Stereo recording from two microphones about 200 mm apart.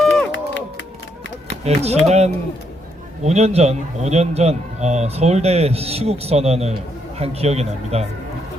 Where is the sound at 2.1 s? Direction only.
35° right (ahead or behind).